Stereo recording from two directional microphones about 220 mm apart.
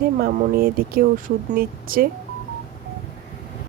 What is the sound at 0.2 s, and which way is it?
Speech, 40° right (ahead or behind).